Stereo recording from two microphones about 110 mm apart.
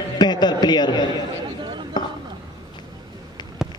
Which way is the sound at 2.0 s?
40° left (ahead or behind).